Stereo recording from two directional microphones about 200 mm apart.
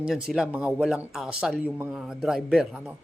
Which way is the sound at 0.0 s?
5° right (ahead or behind).